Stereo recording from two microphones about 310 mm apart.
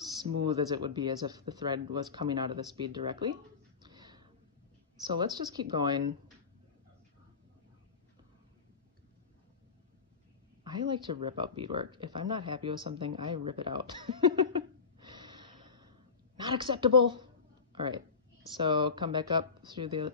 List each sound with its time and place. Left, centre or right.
0.6 s speech: centre
3.8 s a sound: centre
5.0 s speech: centre
10.6 s speech: centre